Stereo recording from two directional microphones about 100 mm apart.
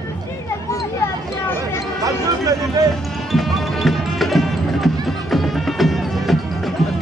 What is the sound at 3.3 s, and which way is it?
Music, centre (ahead or behind).